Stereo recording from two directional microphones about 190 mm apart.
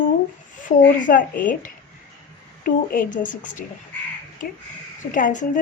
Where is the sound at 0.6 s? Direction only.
45° left (ahead or behind).